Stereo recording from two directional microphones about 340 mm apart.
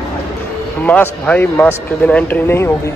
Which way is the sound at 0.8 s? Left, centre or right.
Centre.